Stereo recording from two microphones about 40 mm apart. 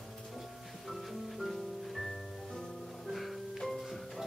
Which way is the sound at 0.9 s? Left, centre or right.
Centre.